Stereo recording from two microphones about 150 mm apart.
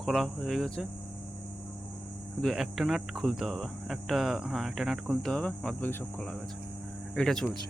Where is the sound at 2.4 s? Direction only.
Centre (ahead or behind).